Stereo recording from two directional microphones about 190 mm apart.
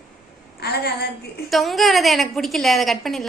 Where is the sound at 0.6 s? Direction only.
55° left (ahead or behind).